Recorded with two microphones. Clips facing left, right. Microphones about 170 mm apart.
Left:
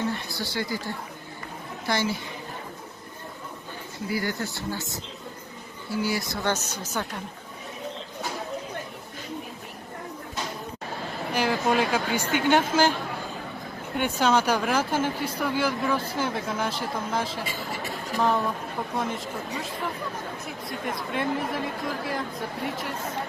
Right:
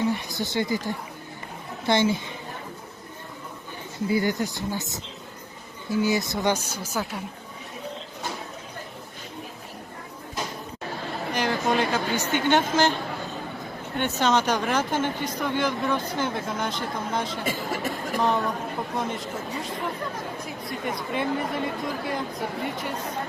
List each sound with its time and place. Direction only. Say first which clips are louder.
0.1 s speech: right 4 dB; 20° right (ahead or behind)
4.1 s speech: right 5 dB; 20° right (ahead or behind)
11.3 s speech: left 1 dB; 5° left (ahead or behind)
13.9 s speech: even; 10° left (ahead or behind)
17.4 s speech: right 5 dB; 50° right (ahead or behind)
18.2 s speech: even; centre (ahead or behind)
20.7 s speech: right 1 dB; centre (ahead or behind)